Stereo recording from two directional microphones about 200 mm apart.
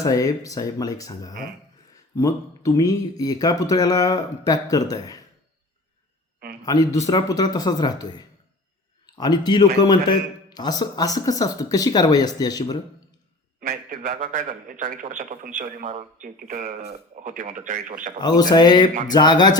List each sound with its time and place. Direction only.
0.0 s speech: 15° left (ahead or behind)
6.6 s speech: 15° left (ahead or behind)
13.6 s a man's voice: 45° right (ahead or behind)
18.2 s speech: 20° left (ahead or behind)